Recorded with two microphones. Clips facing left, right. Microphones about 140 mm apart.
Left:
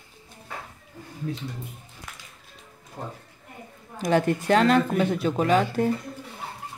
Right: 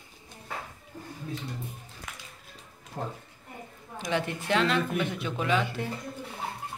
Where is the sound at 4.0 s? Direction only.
45° left (ahead or behind).